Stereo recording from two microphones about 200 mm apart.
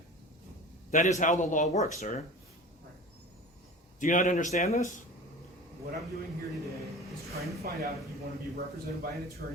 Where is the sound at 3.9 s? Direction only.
40° left (ahead or behind).